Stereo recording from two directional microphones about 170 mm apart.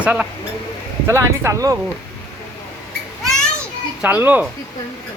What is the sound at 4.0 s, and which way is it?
Speech, 10° right (ahead or behind).